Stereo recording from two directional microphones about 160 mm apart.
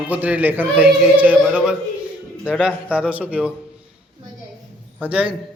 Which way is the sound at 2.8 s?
5° right (ahead or behind).